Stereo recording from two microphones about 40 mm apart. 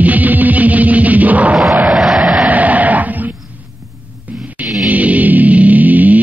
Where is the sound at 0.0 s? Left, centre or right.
Right.